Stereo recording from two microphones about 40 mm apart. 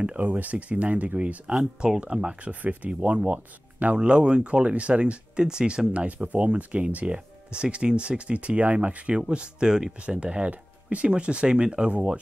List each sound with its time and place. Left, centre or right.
0.2 s speech: right
1.6 s speech: centre
2.1 s speech: right
2.6 s speech: right
3.8 s speech: right
5.4 s speech: centre
5.9 s speech: right; by 9.9 s centre
10.0 s speech: right